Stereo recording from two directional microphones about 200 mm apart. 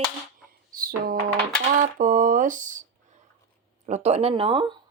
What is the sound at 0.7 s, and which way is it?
Music, 45° right (ahead or behind).